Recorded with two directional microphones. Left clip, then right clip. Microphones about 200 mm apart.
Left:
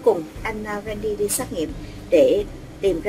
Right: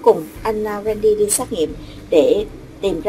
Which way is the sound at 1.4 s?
10° right (ahead or behind).